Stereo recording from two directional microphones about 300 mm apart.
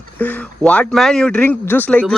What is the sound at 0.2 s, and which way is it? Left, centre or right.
Speech, centre.